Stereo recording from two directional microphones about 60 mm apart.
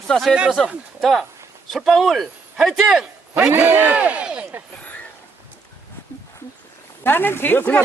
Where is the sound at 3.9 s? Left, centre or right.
Right.